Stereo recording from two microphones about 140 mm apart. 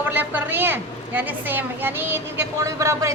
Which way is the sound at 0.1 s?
15° right (ahead or behind).